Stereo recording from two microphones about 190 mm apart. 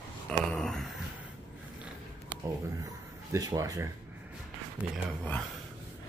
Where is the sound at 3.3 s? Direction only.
15° right (ahead or behind).